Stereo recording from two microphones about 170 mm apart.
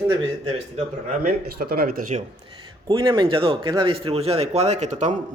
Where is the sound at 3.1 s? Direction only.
30° right (ahead or behind).